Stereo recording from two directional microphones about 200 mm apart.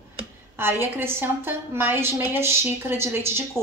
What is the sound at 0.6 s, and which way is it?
A woman's voice, 10° right (ahead or behind).